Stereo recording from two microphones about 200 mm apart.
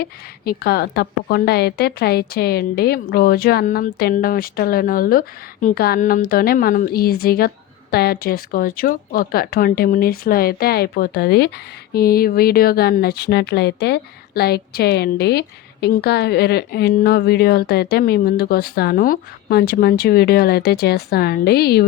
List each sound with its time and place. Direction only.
0.0 s speech: 50° left (ahead or behind)